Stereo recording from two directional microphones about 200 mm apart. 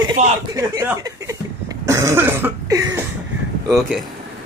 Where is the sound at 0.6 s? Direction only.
15° right (ahead or behind).